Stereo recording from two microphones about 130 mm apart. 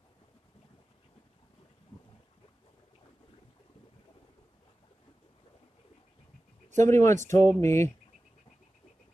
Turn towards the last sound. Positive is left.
turn(degrees=20)  # may be behind; listen again after turning